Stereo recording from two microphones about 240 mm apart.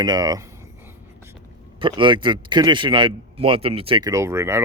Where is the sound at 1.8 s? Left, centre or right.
Centre.